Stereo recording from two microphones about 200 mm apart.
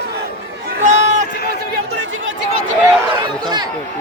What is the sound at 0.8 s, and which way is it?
Run, 35° right (ahead or behind).